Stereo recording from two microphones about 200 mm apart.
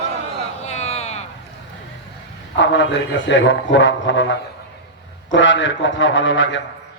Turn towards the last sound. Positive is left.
turn(degrees=70)  # may be behind; listen again after turning